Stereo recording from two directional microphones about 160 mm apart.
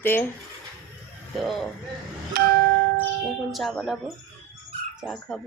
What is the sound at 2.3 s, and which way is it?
Bell, 70° right (ahead or behind).